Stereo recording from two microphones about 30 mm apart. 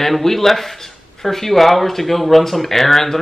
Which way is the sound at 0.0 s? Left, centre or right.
Centre.